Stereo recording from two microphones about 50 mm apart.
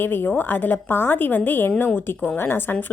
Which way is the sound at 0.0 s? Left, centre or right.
Left.